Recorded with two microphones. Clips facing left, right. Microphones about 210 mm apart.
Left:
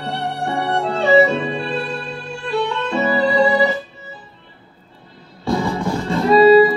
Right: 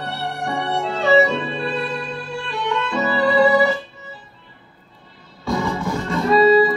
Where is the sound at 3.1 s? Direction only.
20° left (ahead or behind).